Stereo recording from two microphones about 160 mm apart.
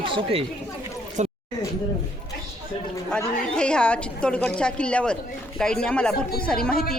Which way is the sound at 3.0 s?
5° left (ahead or behind).